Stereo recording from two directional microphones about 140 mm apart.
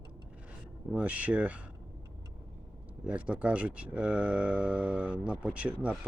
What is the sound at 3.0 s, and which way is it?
Speech, 10° right (ahead or behind).